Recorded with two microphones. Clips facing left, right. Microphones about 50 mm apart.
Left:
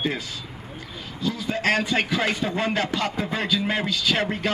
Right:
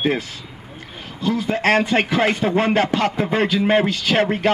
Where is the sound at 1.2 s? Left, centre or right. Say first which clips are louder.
Right 5 dB; right.